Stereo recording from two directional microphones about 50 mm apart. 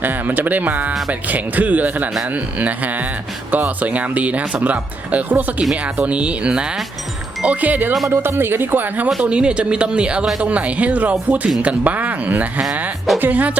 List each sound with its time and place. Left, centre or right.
0.0 s a woman's voice: right; by 6.7 s centre
7.4 s speech: right
8.1 s speech: right
9.2 s a woman's voice: right